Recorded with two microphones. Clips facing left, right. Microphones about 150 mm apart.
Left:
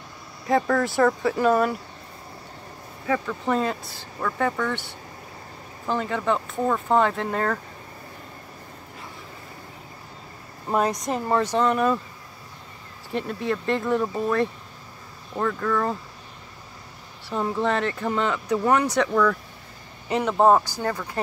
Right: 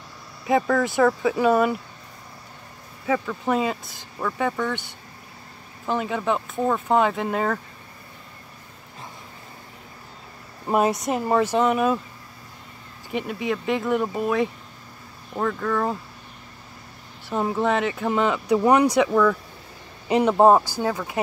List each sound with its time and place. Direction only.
0.5 s speech: 5° right (ahead or behind)
3.1 s speech: 5° right (ahead or behind)
5.9 s speech: 10° right (ahead or behind)
10.7 s speech: 10° right (ahead or behind)
13.1 s speech: 10° right (ahead or behind)
17.3 s speech: 15° right (ahead or behind)
20.1 s speech: 15° right (ahead or behind)